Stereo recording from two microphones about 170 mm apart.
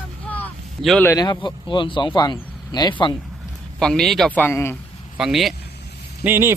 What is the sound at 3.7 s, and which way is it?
A man's voice, 5° left (ahead or behind).